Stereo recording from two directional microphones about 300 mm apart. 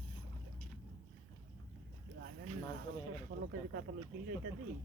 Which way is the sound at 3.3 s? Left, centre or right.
Right.